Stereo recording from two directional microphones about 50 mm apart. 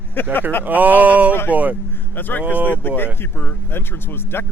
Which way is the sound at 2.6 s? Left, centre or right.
Left.